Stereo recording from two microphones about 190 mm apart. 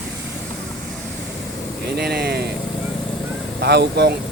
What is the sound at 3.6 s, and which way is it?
Speech, 60° right (ahead or behind).